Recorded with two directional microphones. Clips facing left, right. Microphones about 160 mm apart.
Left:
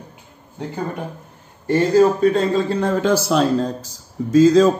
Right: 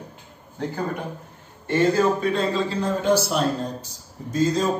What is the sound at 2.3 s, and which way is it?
A man's voice, 60° left (ahead or behind).